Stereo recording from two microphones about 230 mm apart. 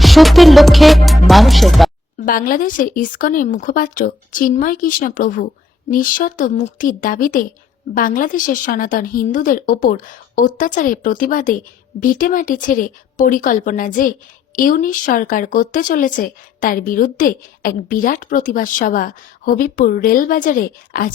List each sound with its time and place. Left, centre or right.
0.0 s music: centre
2.1 s a woman's voice: left